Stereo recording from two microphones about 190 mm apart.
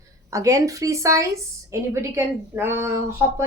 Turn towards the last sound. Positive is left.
turn(degrees=-15)  # may be behind; listen again after turning